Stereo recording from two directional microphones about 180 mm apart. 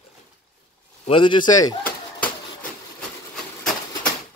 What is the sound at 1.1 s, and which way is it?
Speech, 25° left (ahead or behind).